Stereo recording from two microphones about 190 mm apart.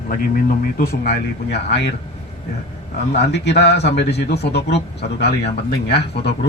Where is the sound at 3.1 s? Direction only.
60° left (ahead or behind).